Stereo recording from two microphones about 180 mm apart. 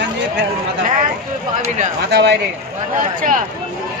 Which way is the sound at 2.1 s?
65° right (ahead or behind).